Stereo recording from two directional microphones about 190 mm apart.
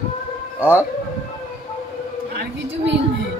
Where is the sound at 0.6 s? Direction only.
10° right (ahead or behind).